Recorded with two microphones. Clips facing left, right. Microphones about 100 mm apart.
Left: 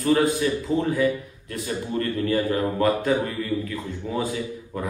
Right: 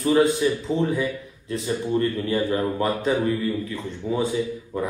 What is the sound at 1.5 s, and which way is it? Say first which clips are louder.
Speech: right 4 dB; 25° right (ahead or behind).